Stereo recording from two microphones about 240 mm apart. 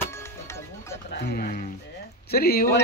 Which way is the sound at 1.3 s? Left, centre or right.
Left.